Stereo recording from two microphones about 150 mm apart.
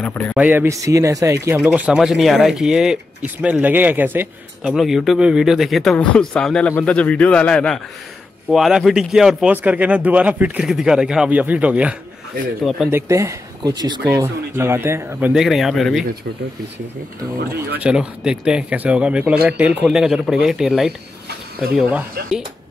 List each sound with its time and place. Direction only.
0.0 s a man's voice: 10° left (ahead or behind)
0.4 s a man's voice: 15° right (ahead or behind)
1.6 s speech: 10° right (ahead or behind)
4.7 s a man's voice: centre (ahead or behind)
12.9 s a man's voice: 20° right (ahead or behind)
14.1 s speech: 15° right (ahead or behind); by 16.1 s centre (ahead or behind)
17.7 s speech: 5° right (ahead or behind)